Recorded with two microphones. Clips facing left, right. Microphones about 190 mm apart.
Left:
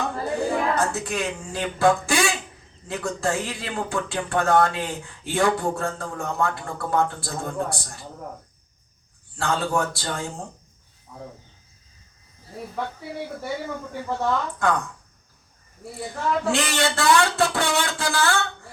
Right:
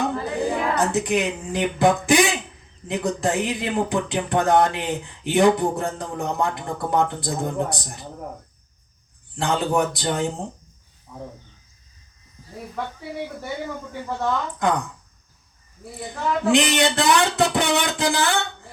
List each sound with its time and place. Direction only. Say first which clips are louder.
0.0 s a sound: right 2 dB; 20° right (ahead or behind)
2.8 s speech: right 3 dB; 20° right (ahead or behind)
9.3 s speech: right 3 dB; 20° right (ahead or behind)
14.6 s speech: right 2 dB; 20° right (ahead or behind)
16.0 s speech: even; 20° right (ahead or behind)